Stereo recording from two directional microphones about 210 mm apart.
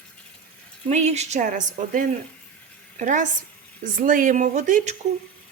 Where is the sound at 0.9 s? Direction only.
30° right (ahead or behind).